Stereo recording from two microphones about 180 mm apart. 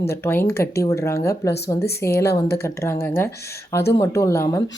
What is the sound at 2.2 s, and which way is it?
Speech, 65° left (ahead or behind).